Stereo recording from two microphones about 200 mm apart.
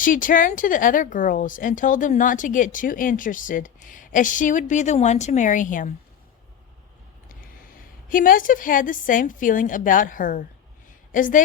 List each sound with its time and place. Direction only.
0.0 s speech: 40° left (ahead or behind)
8.1 s speech: 45° left (ahead or behind)